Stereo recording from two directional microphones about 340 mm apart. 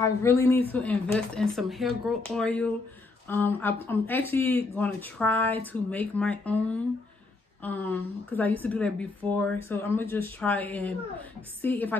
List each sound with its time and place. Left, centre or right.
0.2 s a woman's voice: centre